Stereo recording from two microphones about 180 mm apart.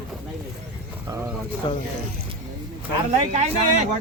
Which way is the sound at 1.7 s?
25° left (ahead or behind).